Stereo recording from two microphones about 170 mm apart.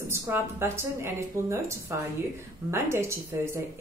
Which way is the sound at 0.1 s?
15° right (ahead or behind).